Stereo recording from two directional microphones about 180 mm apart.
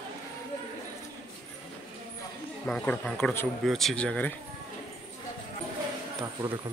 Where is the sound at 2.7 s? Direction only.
5° left (ahead or behind).